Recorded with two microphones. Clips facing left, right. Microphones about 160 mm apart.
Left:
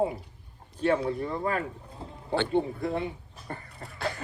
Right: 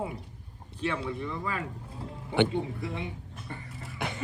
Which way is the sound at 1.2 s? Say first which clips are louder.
Left 5 dB; 45° left (ahead or behind).